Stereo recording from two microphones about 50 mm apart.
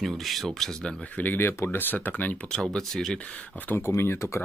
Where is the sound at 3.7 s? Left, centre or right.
Left.